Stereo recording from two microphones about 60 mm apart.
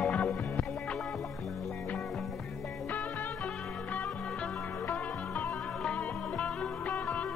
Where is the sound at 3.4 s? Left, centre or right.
Centre.